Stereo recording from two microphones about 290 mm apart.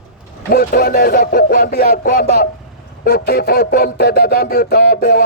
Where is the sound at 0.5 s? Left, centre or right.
Left.